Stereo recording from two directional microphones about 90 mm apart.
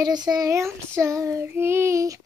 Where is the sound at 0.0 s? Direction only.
50° right (ahead or behind).